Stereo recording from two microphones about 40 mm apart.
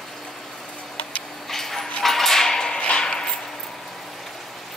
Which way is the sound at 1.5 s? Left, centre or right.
Centre.